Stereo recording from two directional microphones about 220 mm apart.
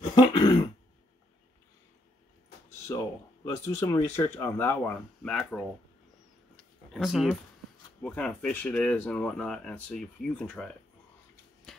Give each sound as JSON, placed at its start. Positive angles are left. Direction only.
{"t": 0.1, "sound": "throat clearing", "side_deg": 20}
{"t": 2.9, "sound": "speech", "side_deg": 10}
{"t": 6.5, "sound": "a sound", "side_deg": 0}
{"t": 8.0, "sound": "speech", "side_deg": 5}